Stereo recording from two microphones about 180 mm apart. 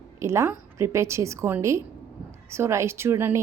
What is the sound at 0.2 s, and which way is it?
A woman's voice, 15° right (ahead or behind).